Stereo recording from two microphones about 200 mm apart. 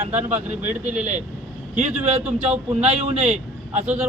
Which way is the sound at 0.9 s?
40° right (ahead or behind).